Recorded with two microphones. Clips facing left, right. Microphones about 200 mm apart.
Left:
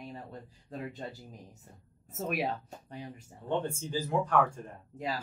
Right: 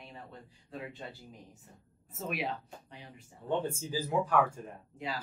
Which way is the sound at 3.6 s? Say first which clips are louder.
Left 1 dB; 5° right (ahead or behind).